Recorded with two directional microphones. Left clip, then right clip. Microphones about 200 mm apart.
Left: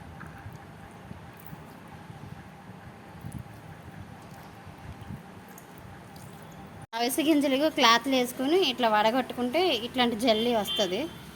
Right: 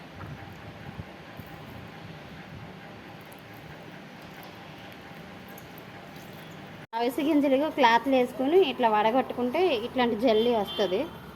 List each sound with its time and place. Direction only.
6.9 s a woman's voice: 65° left (ahead or behind)